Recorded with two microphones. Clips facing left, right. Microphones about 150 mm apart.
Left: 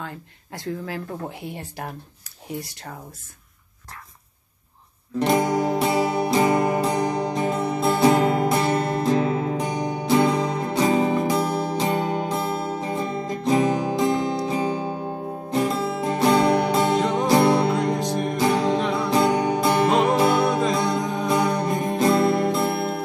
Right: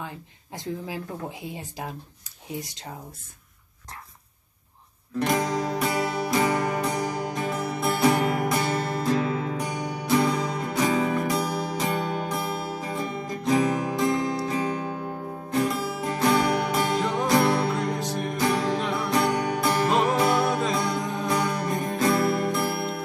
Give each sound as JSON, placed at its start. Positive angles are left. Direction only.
{"t": 0.0, "sound": "speech", "side_deg": -20}
{"t": 2.6, "sound": "speech", "side_deg": -20}
{"t": 5.2, "sound": "music", "side_deg": 25}